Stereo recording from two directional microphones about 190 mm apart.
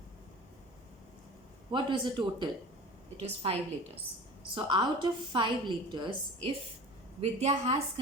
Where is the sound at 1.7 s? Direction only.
25° right (ahead or behind).